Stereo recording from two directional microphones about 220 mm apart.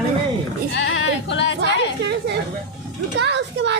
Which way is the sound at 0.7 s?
55° left (ahead or behind).